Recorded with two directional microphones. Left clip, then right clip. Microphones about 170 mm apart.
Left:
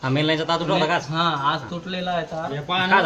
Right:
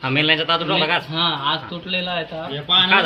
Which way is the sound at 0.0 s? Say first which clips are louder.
Right 4 dB; 40° left (ahead or behind).